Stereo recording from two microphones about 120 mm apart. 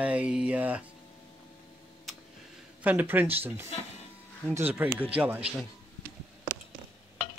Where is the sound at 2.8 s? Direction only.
15° right (ahead or behind).